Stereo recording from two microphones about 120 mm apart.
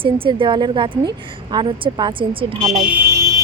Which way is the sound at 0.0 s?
45° right (ahead or behind).